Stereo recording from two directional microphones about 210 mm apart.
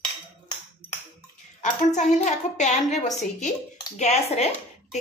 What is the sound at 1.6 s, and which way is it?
A woman's voice, 35° left (ahead or behind).